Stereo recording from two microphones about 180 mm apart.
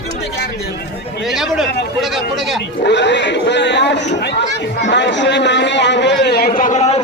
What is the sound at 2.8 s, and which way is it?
A man's voice, 75° left (ahead or behind).